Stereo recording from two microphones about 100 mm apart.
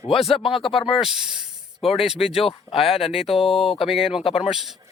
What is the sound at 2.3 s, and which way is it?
Speech, 70° left (ahead or behind).